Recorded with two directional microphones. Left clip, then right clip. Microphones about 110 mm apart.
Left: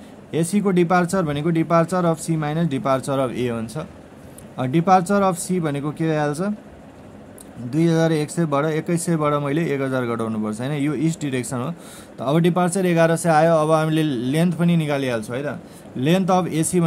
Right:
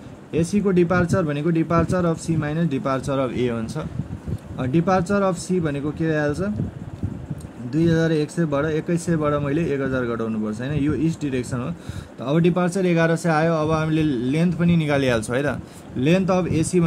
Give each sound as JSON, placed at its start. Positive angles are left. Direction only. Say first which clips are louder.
{"t": 0.3, "sound": "speech", "louder": "even", "side_deg": 20}
{"t": 4.6, "sound": "speech", "louder": "left 4 dB", "side_deg": 15}
{"t": 7.7, "sound": "speech", "louder": "left 1 dB", "side_deg": 25}
{"t": 15.0, "sound": "speech", "louder": "right 3 dB", "side_deg": -25}
{"t": 16.0, "sound": "speech", "louder": "left 1 dB", "side_deg": 10}